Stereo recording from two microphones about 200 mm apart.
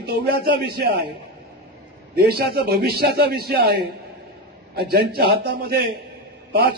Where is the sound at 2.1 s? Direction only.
50° right (ahead or behind).